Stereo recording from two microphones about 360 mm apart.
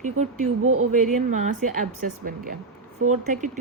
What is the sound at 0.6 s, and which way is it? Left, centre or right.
Speech, right.